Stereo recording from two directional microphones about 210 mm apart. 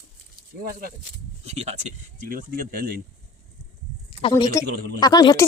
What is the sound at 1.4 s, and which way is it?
Speech, 30° right (ahead or behind).